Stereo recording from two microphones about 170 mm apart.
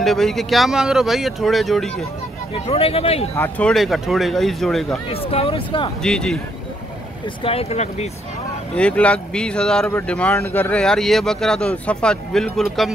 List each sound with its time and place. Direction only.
0.0 s speech: centre (ahead or behind)
2.5 s speech: 35° left (ahead or behind)
3.3 s speech: 10° left (ahead or behind)
5.1 s speech: 35° left (ahead or behind)
6.0 s speech: 5° left (ahead or behind)
7.4 s speech: 35° left (ahead or behind)
8.7 s speech: 5° left (ahead or behind)